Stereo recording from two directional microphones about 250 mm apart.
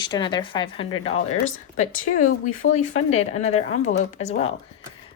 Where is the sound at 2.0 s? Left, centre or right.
Left.